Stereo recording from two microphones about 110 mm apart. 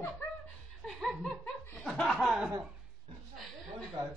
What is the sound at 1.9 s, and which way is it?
Speech, centre (ahead or behind).